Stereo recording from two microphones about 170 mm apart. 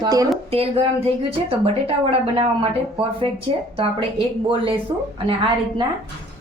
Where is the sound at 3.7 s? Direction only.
30° right (ahead or behind).